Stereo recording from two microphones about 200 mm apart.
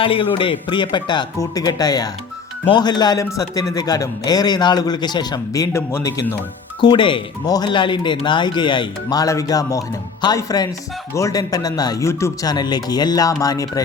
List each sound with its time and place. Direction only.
0.0 s speech: 25° left (ahead or behind)